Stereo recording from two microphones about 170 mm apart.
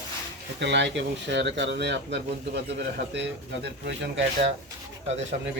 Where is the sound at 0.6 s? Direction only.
90° right.